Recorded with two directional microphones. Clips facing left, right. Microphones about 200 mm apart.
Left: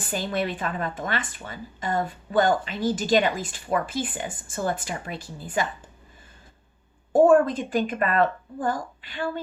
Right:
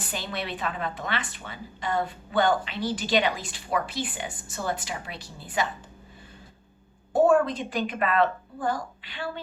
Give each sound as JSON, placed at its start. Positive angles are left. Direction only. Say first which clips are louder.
{"t": 0.1, "sound": "a woman's voice", "louder": "left 7 dB", "side_deg": 45}
{"t": 7.1, "sound": "a woman's voice", "louder": "left 4 dB", "side_deg": 50}